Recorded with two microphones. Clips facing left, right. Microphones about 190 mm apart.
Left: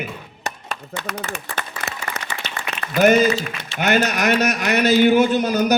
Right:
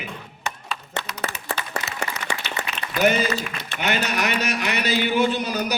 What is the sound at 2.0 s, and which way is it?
Applause, 55° right (ahead or behind).